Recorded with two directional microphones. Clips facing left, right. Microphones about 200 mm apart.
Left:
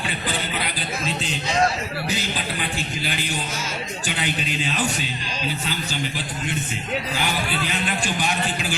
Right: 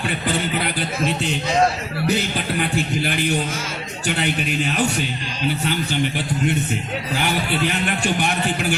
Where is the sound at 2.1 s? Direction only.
55° right (ahead or behind).